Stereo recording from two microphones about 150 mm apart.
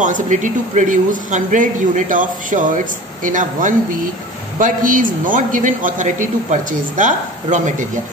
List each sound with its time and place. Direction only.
0.0 s speech: 55° right (ahead or behind)